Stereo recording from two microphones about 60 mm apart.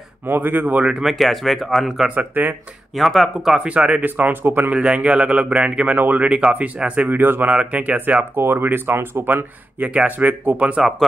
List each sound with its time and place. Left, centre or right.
0.3 s speech: right
1.0 s speech: centre
2.0 s a man's voice: right
3.0 s speech: centre
3.5 s a man's voice: right
4.7 s a man's voice: centre
7.5 s a man's voice: right
8.4 s speech: right
9.8 s a man's voice: right